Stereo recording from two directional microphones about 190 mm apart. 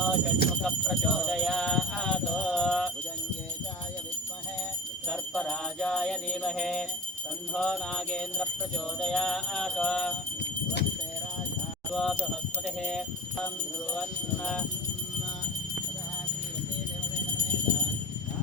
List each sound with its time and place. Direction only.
0.0 s jingle bell: centre (ahead or behind)
5.0 s jingle bell: 5° left (ahead or behind)
7.5 s music: 5° left (ahead or behind)
11.9 s music: centre (ahead or behind)